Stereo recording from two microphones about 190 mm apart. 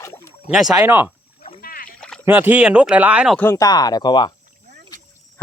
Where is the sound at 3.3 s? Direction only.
10° left (ahead or behind).